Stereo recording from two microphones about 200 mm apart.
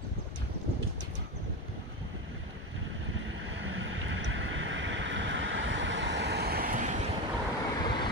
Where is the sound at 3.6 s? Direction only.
70° right (ahead or behind); by 7.0 s 40° right (ahead or behind).